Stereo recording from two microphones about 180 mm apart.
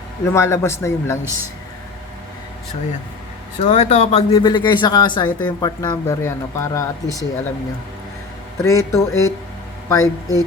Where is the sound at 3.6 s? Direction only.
40° left (ahead or behind).